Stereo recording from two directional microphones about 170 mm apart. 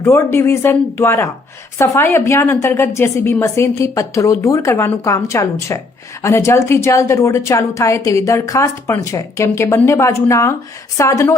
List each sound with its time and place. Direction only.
0.0 s a woman's voice: 15° left (ahead or behind)